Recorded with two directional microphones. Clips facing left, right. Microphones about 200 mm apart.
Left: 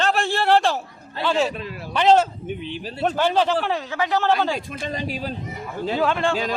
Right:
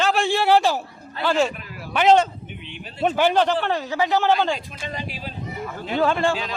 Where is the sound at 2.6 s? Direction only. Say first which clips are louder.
Left 7 dB; 35° left (ahead or behind).